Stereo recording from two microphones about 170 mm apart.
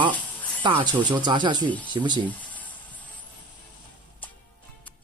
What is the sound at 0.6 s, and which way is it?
Speech, 25° right (ahead or behind).